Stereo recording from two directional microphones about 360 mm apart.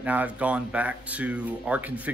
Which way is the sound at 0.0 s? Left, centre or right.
Centre.